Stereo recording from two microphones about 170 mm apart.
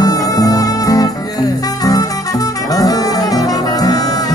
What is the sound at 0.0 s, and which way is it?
Music, 20° left (ahead or behind).